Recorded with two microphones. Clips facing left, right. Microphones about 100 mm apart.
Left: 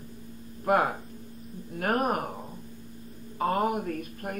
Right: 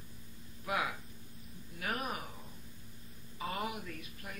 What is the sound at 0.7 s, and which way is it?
A man's voice, 45° left (ahead or behind).